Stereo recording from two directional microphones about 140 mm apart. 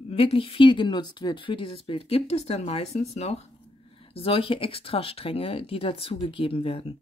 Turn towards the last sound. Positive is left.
turn(degrees=40)  # may be behind; listen again after turning